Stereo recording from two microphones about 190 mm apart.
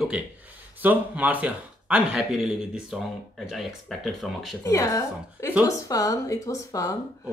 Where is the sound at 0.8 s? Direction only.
5° right (ahead or behind).